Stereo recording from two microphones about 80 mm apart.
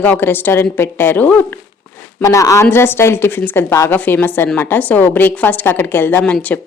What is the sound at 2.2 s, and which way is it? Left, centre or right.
Speech, left.